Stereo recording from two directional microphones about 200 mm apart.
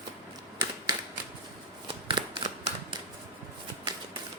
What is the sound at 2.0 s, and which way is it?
Shuffling cards, 25° right (ahead or behind).